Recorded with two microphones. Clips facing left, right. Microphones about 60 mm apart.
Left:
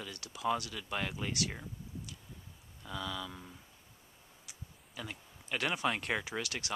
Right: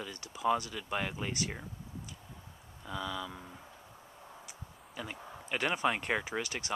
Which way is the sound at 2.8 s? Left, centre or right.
Centre.